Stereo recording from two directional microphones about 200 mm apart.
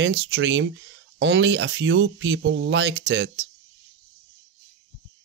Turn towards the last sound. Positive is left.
turn(degrees=-60)  # may be behind; listen again after turning